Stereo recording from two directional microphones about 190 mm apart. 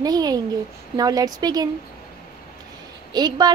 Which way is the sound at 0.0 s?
20° right (ahead or behind).